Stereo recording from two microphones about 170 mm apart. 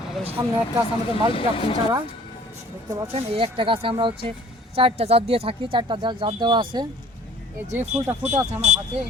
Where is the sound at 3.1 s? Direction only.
35° right (ahead or behind).